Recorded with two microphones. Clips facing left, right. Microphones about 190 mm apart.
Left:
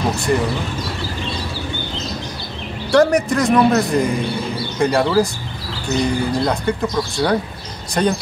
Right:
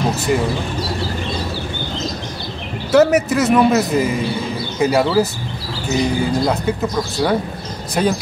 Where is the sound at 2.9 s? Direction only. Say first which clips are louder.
Right 1 dB; 5° right (ahead or behind).